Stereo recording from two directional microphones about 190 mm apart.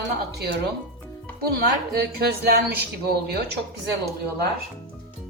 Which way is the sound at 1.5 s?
55° right (ahead or behind).